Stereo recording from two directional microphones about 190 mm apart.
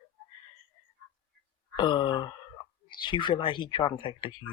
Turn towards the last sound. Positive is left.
turn(degrees=25)  # may be behind; listen again after turning